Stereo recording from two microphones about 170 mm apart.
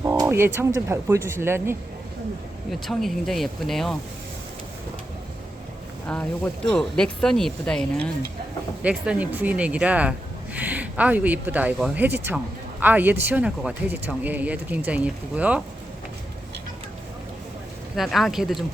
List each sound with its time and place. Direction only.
0.0 s speech: 15° right (ahead or behind)
2.6 s speech: centre (ahead or behind)
6.1 s speech: 5° left (ahead or behind)
8.8 s speech: 10° right (ahead or behind)
17.9 s speech: centre (ahead or behind)